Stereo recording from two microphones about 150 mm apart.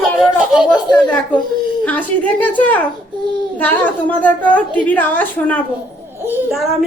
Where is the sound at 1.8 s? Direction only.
10° left (ahead or behind).